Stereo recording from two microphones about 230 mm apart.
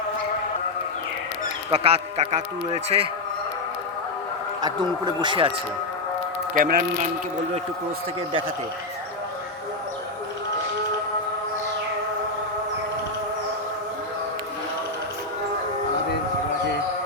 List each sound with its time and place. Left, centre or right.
1.7 s a man's voice: right
4.6 s a man's voice: centre
6.5 s a man's voice: right